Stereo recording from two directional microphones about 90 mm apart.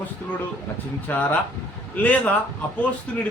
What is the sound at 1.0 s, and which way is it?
A man's voice, 20° left (ahead or behind).